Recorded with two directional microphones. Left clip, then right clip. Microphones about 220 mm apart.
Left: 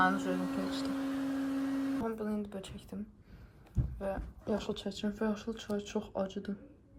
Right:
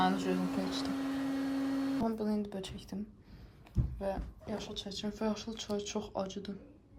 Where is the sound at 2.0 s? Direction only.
10° right (ahead or behind).